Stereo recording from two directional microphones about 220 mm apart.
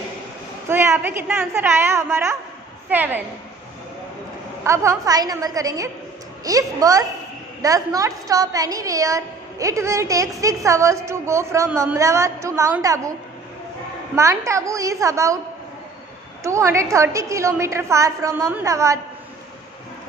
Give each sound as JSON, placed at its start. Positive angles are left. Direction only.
{"t": 0.7, "sound": "a woman's voice", "side_deg": -10}
{"t": 4.6, "sound": "a woman's voice", "side_deg": -15}
{"t": 14.1, "sound": "a woman's voice", "side_deg": -15}
{"t": 16.4, "sound": "a woman's voice", "side_deg": -15}